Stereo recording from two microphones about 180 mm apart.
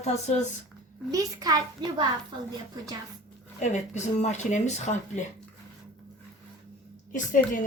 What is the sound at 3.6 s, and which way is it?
Speech, 40° left (ahead or behind).